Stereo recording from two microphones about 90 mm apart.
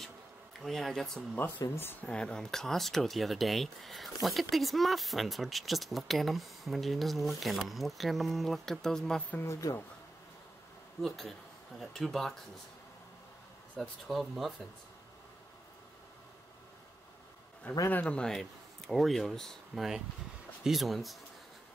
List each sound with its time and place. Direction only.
0.7 s speech: 5° left (ahead or behind)
1.8 s speech: 25° left (ahead or behind)
2.0 s speech: 10° left (ahead or behind)
9.4 s speech: 35° left (ahead or behind)
11.0 s speech: 5° left (ahead or behind)
13.7 s speech: centre (ahead or behind)
17.7 s speech: 20° left (ahead or behind); by 21.2 s centre (ahead or behind)